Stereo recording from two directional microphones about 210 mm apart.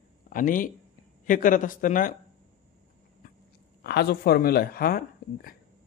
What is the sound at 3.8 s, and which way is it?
Speech, 50° left (ahead or behind).